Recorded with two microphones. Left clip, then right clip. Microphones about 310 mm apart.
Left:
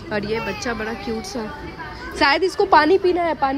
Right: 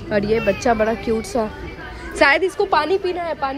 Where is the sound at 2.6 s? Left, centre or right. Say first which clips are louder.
Left 3 dB; left.